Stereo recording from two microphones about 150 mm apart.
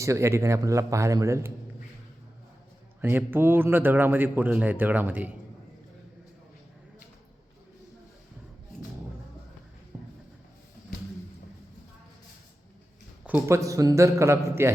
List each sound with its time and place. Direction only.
0.0 s a man's voice: 20° right (ahead or behind)
3.0 s speech: 15° right (ahead or behind)
9.9 s music: 10° right (ahead or behind)
13.2 s a man's voice: 10° right (ahead or behind)
13.6 s a man's voice: 20° right (ahead or behind)